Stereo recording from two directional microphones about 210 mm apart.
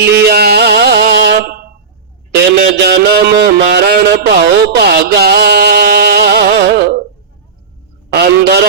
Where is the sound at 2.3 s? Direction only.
50° right (ahead or behind).